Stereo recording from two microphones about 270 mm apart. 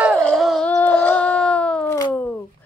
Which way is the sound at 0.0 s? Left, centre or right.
Centre.